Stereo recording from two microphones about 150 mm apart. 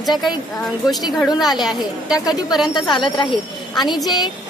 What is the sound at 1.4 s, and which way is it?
A woman's voice, centre (ahead or behind).